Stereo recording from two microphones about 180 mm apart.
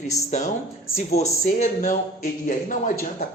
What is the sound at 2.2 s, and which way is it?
Speech, 50° left (ahead or behind).